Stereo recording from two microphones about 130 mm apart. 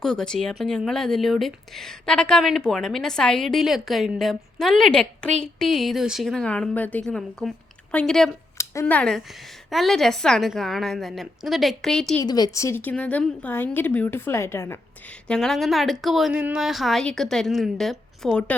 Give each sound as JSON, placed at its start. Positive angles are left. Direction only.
{"t": 0.0, "sound": "a woman's voice", "side_deg": 5}
{"t": 8.5, "sound": "a sound", "side_deg": 20}
{"t": 8.9, "sound": "a woman's voice", "side_deg": 5}
{"t": 12.2, "sound": "a woman's voice", "side_deg": 30}
{"t": 15.3, "sound": "a woman's voice", "side_deg": 0}